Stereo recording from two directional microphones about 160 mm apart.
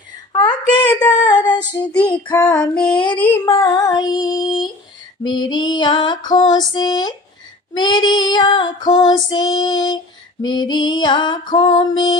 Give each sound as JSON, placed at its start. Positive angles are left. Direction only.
{"t": 0.3, "sound": "a sound", "side_deg": 25}
{"t": 0.9, "sound": "female singing", "side_deg": 25}
{"t": 2.5, "sound": "female singing", "side_deg": 5}
{"t": 3.2, "sound": "child singing", "side_deg": 15}